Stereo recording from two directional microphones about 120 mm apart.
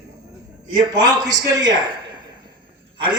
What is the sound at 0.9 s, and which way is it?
Speech, 30° right (ahead or behind).